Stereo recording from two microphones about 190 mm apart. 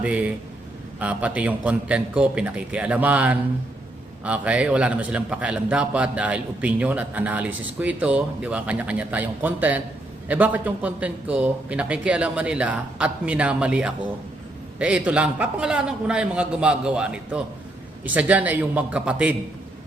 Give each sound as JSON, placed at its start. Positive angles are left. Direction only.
{"t": 0.0, "sound": "a man's voice", "side_deg": -5}